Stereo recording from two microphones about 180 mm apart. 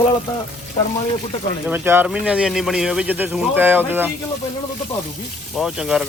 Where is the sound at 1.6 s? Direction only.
10° right (ahead or behind).